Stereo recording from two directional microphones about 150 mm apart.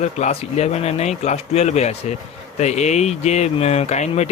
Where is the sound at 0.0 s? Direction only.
45° left (ahead or behind).